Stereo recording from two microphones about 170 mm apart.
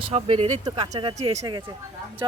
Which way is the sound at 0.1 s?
35° right (ahead or behind).